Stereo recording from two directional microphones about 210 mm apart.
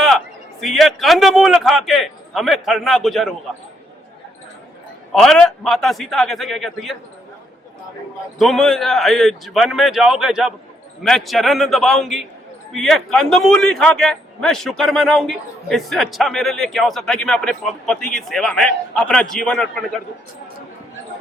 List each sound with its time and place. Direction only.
0.6 s a man's voice: centre (ahead or behind)
5.1 s a man's voice: 5° left (ahead or behind)
8.4 s a man's voice: centre (ahead or behind)